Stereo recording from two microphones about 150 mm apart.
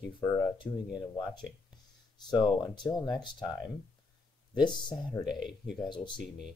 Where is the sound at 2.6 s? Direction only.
30° left (ahead or behind).